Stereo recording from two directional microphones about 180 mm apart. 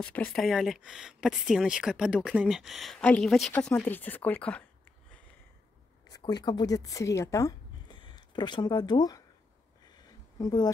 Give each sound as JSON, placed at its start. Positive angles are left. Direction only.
{"t": 0.0, "sound": "speech", "side_deg": 5}
{"t": 6.0, "sound": "speech", "side_deg": 20}
{"t": 10.4, "sound": "speech", "side_deg": 25}